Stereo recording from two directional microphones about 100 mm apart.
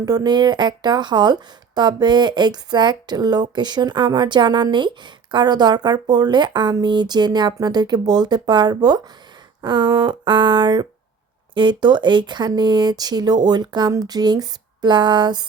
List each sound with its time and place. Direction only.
0.0 s speech: 40° right (ahead or behind)